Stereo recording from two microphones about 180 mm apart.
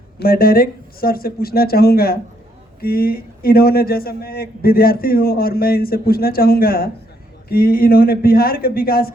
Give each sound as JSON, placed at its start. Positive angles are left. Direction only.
{"t": 0.2, "sound": "a man's voice", "side_deg": 55}